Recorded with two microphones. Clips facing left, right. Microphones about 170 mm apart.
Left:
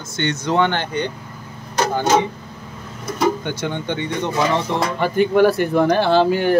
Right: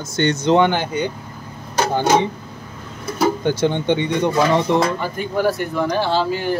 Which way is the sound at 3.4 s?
35° right (ahead or behind).